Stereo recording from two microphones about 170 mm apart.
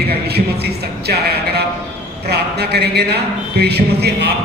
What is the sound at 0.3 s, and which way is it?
A man's voice, 70° right (ahead or behind).